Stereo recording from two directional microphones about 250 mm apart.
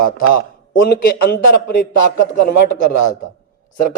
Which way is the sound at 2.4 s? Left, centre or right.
Left.